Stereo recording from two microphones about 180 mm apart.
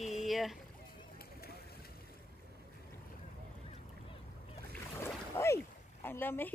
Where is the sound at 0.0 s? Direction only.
Centre (ahead or behind).